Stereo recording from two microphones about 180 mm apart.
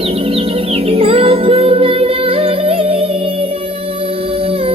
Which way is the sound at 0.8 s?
30° right (ahead or behind).